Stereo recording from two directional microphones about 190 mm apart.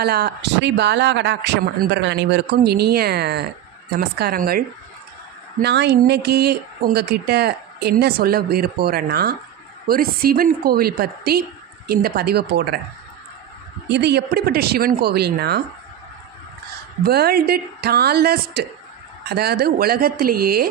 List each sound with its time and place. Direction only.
0.0 s a woman's voice: 55° right (ahead or behind)
5.6 s a woman's voice: 60° right (ahead or behind)
13.9 s speech: 60° right (ahead or behind)
17.0 s a woman's voice: 55° right (ahead or behind)